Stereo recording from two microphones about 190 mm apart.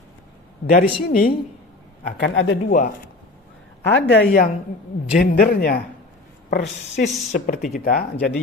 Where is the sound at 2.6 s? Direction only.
45° left (ahead or behind).